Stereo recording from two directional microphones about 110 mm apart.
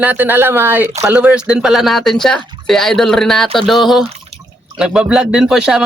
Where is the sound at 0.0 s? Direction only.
15° right (ahead or behind).